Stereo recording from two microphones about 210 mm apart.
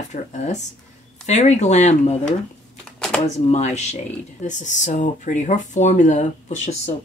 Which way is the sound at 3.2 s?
30° left (ahead or behind).